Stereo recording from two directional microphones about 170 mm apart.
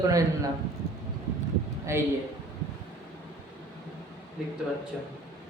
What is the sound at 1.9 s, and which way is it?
Speech, 15° right (ahead or behind).